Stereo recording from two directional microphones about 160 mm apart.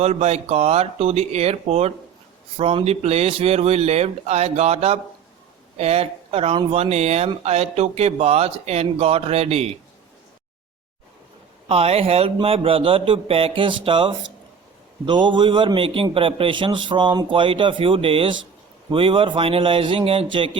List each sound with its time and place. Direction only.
0.0 s a man's voice: 40° right (ahead or behind)
11.7 s a man's voice: 40° right (ahead or behind)